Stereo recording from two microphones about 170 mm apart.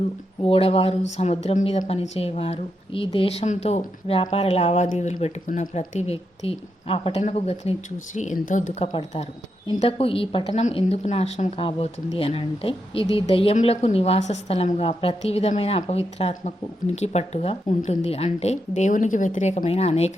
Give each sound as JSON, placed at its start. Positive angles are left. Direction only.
{"t": 0.4, "sound": "a woman's voice", "side_deg": 35}
{"t": 9.7, "sound": "a woman's voice", "side_deg": 35}